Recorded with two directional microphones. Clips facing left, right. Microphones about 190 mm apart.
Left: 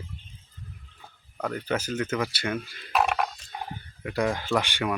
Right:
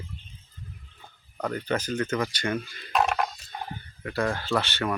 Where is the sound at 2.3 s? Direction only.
5° left (ahead or behind).